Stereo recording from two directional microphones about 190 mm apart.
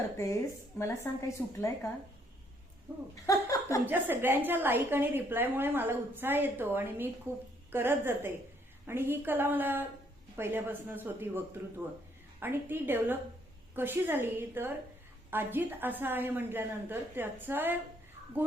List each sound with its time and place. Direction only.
0.8 s a woman's voice: 15° left (ahead or behind)
2.9 s a woman's voice: 15° right (ahead or behind)
3.2 s a sound: 15° left (ahead or behind)
3.8 s a woman's voice: 10° right (ahead or behind)